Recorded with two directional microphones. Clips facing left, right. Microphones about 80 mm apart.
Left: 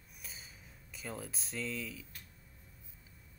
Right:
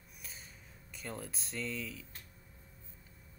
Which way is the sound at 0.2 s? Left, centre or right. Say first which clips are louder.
Even; centre.